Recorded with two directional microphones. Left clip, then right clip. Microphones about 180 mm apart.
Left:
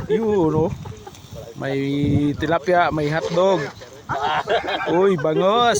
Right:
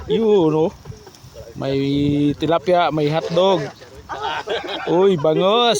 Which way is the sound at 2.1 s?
10° left (ahead or behind).